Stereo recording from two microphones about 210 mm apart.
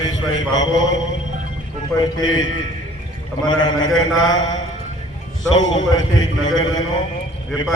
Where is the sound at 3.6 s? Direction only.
20° left (ahead or behind).